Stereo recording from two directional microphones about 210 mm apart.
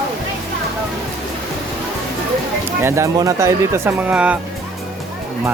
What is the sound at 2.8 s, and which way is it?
Speech, 10° right (ahead or behind).